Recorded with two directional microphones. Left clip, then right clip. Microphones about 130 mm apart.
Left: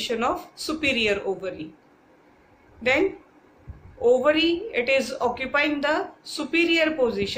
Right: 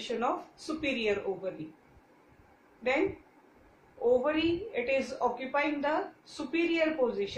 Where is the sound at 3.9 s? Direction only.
30° left (ahead or behind).